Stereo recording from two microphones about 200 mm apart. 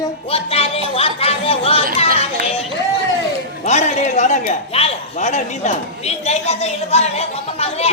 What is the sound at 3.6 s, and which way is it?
A man's voice, 35° left (ahead or behind).